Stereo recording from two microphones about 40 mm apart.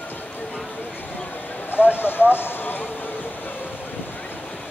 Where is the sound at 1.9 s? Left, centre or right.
Left.